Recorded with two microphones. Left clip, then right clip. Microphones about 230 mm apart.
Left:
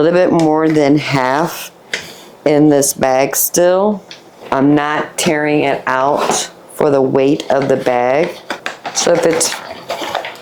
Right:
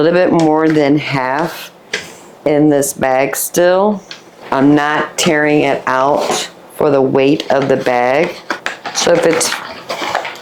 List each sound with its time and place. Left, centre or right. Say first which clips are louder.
0.0 s speech: even; left